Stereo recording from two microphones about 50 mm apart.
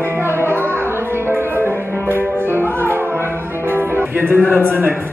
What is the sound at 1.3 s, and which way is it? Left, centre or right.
Music, right.